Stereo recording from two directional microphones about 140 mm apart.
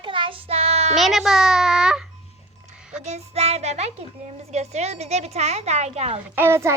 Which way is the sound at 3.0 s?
50° right (ahead or behind).